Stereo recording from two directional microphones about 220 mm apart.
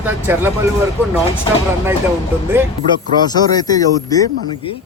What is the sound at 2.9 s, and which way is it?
Speech, 20° left (ahead or behind).